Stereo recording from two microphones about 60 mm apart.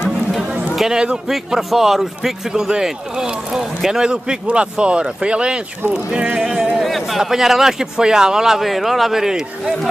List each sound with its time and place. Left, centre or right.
0.7 s a man's voice: centre
6.4 s a sound: centre
6.8 s speech: centre